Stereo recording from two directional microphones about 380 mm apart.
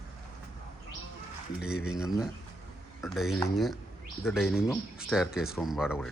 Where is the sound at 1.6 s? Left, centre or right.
Centre.